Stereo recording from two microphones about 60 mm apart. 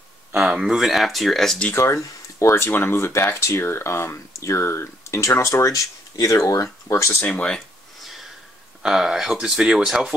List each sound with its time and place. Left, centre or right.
0.4 s speech: centre
1.8 s speech: left
6.9 s speech: left
7.2 s speech: left
8.0 s a sound: centre
8.8 s speech: centre